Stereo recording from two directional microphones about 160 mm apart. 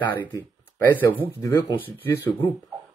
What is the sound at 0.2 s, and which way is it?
Speech, 15° left (ahead or behind).